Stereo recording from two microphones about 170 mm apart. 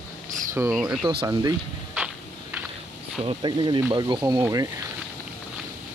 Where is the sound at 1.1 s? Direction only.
30° right (ahead or behind).